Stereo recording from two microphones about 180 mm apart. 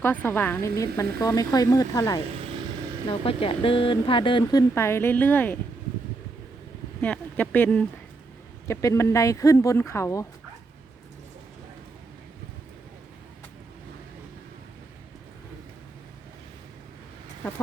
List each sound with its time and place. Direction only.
0.0 s speech: 10° left (ahead or behind)
3.1 s speech: 30° left (ahead or behind)
4.7 s speech: 15° left (ahead or behind)
7.0 s speech: 10° left (ahead or behind)